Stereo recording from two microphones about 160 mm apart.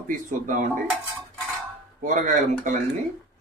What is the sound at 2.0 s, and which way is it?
Speech, 50° right (ahead or behind).